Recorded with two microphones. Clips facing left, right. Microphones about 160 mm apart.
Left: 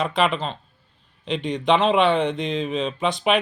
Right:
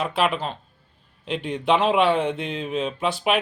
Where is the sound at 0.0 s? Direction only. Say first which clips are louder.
Left 1 dB; 5° right (ahead or behind).